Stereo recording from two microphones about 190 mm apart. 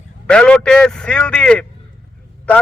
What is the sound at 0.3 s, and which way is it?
A man's voice, 5° left (ahead or behind).